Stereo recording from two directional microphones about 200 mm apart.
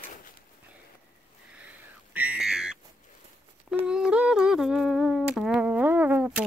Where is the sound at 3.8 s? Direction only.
5° right (ahead or behind).